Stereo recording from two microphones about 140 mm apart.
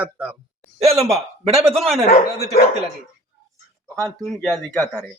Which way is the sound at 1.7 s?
Centre (ahead or behind).